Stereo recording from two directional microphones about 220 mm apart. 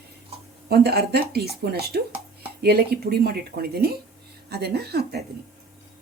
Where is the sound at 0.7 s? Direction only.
45° right (ahead or behind).